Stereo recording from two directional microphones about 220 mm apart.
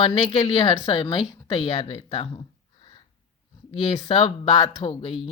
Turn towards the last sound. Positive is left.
turn(degrees=25)  # may be behind; listen again after turning